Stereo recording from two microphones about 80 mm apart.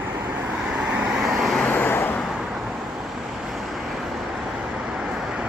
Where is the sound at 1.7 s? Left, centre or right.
Left.